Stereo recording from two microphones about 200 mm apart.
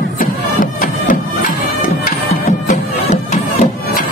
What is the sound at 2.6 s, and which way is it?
Music, 40° left (ahead or behind).